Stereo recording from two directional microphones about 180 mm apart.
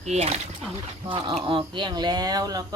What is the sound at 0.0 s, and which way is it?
Speech, 40° right (ahead or behind).